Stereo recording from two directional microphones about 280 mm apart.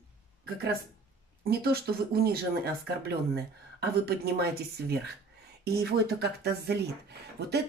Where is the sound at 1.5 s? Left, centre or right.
Right.